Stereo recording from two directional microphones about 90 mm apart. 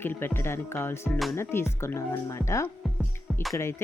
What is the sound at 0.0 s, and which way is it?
Speech, 25° left (ahead or behind).